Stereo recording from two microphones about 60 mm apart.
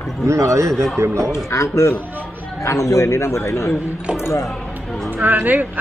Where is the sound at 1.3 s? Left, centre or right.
Left.